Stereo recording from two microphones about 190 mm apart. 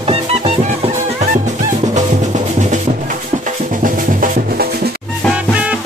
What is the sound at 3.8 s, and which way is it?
Music, 45° right (ahead or behind).